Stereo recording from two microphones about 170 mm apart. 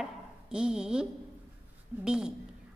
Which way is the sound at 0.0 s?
5° right (ahead or behind).